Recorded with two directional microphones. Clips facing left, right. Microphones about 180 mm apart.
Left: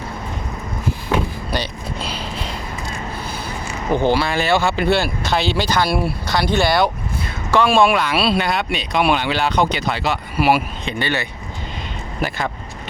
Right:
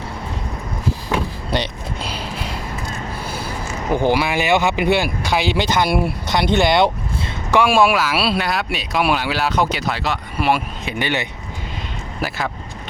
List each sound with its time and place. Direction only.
1.5 s speech: 25° right (ahead or behind)
3.9 s speech: 15° right (ahead or behind)
7.5 s speech: 10° right (ahead or behind); by 10.6 s 5° left (ahead or behind)
10.8 s speech: 15° right (ahead or behind)
12.2 s speech: centre (ahead or behind)